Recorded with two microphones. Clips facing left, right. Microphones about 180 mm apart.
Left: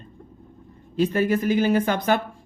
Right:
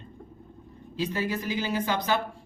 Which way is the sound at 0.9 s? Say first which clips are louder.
Left 8 dB; 55° left (ahead or behind).